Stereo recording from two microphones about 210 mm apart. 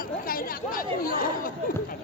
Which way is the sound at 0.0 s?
45° left (ahead or behind).